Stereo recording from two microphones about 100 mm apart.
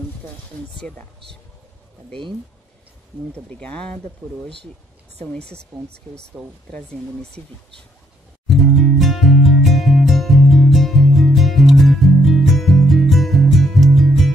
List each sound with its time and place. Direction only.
0.7 s speech: 5° left (ahead or behind)
3.4 s speech: 10° left (ahead or behind)
5.2 s speech: 10° left (ahead or behind)
5.7 s speech: 30° right (ahead or behind)
6.4 s speech: centre (ahead or behind)
8.5 s music: centre (ahead or behind)